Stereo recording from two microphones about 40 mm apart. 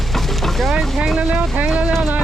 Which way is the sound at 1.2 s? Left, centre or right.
Right.